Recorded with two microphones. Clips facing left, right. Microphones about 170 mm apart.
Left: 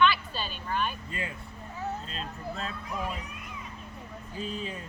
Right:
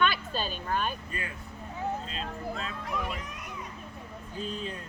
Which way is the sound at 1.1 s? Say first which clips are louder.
Left 2 dB; 25° left (ahead or behind).